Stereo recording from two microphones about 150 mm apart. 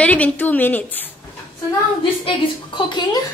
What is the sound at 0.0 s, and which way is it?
A woman's voice, 10° left (ahead or behind).